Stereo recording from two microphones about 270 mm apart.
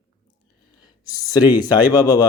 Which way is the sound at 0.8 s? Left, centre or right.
Centre.